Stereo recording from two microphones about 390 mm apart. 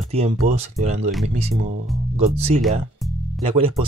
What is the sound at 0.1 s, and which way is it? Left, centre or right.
Speech, centre.